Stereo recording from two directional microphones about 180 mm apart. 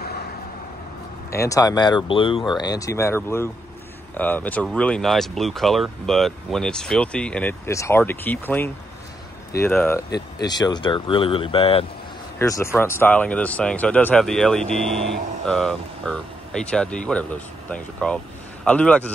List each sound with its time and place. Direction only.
1.3 s speech: 15° left (ahead or behind)
10.4 s speech: 20° left (ahead or behind)
12.4 s speech: 15° left (ahead or behind)